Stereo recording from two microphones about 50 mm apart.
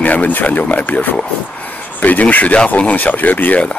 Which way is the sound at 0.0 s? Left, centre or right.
Left.